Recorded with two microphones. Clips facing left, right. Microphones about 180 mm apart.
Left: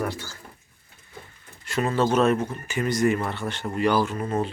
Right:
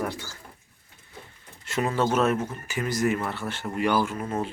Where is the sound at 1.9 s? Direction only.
5° right (ahead or behind).